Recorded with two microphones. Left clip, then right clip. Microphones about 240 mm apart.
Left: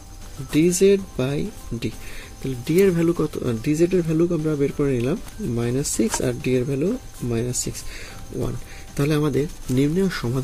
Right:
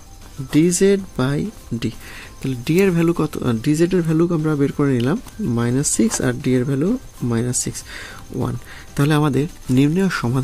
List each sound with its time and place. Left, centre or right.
0.7 s speech: right